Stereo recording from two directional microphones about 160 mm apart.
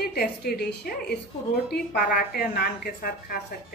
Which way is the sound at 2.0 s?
70° left (ahead or behind).